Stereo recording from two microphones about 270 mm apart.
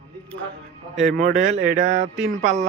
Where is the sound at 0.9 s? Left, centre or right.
Centre.